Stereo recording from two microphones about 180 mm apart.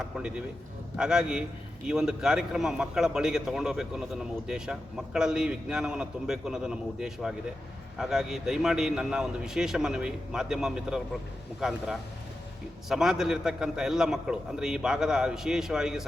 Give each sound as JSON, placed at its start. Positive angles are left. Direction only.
{"t": 0.0, "sound": "a man's voice", "side_deg": -5}
{"t": 12.9, "sound": "a man's voice", "side_deg": -5}